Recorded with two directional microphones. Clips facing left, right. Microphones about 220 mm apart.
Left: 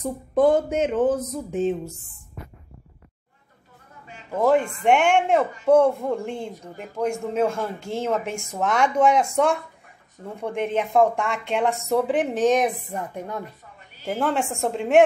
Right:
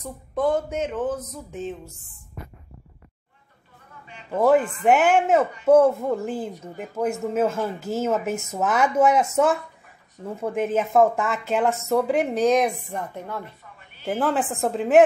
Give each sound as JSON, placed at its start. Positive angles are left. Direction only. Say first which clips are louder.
{"t": 0.0, "sound": "speech", "louder": "left 6 dB", "side_deg": 35}
{"t": 0.8, "sound": "speech", "louder": "left 6 dB", "side_deg": 25}
{"t": 4.4, "sound": "speech", "louder": "right 1 dB", "side_deg": -5}
{"t": 14.0, "sound": "speech", "louder": "right 1 dB", "side_deg": 0}